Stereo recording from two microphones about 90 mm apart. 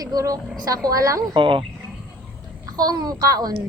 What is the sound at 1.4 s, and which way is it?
Speech, 70° right (ahead or behind).